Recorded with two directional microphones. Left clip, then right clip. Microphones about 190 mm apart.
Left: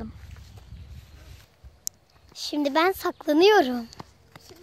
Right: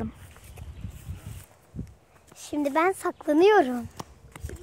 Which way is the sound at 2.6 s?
25° left (ahead or behind).